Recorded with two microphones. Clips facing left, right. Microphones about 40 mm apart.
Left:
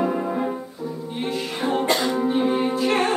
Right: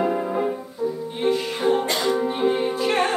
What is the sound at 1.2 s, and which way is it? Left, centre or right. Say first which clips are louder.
Music: right 5 dB; centre.